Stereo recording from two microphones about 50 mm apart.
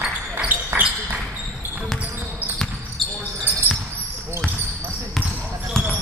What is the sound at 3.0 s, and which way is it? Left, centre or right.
Basketball bounce, centre.